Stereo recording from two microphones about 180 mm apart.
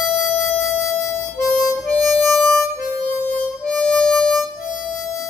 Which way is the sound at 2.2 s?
Centre (ahead or behind).